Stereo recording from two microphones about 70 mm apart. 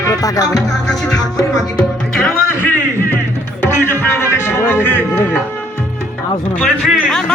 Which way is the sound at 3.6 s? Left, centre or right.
Left.